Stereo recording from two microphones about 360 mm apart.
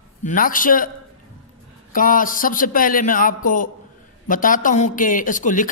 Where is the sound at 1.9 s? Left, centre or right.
Left.